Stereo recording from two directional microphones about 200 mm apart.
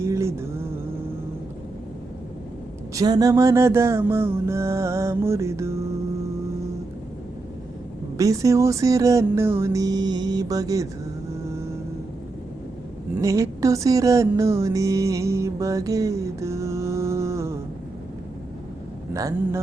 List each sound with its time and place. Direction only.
0.0 s music: 15° right (ahead or behind)
2.9 s music: 20° right (ahead or behind)
8.2 s music: 15° right (ahead or behind)
13.1 s music: 15° right (ahead or behind)
19.1 s music: 15° right (ahead or behind)